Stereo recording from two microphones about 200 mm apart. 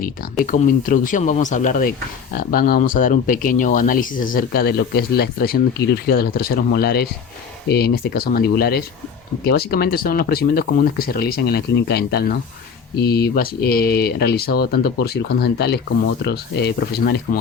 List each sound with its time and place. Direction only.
0.0 s speech: 40° left (ahead or behind)